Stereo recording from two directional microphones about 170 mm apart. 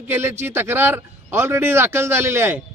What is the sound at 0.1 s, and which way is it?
A man's voice, 15° right (ahead or behind).